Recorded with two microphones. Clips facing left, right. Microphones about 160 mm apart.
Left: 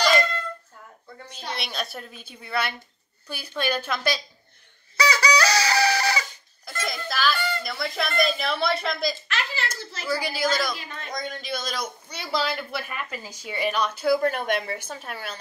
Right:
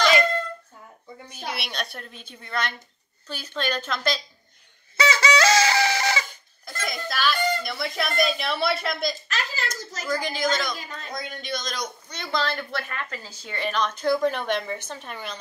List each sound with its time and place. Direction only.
1.1 s a woman's voice: 10° right (ahead or behind)
1.7 s speech: centre (ahead or behind)
4.9 s chicken: 25° right (ahead or behind)
6.8 s a child's voice: centre (ahead or behind)
9.3 s a sound: 40° right (ahead or behind)
10.0 s speech: 5° left (ahead or behind)